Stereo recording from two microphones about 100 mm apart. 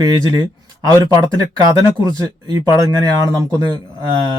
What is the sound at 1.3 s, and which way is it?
Speech, 40° right (ahead or behind).